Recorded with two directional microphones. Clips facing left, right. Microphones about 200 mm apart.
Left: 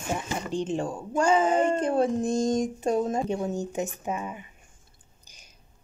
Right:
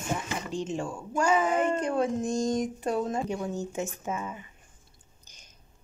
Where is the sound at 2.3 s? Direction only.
50° left (ahead or behind).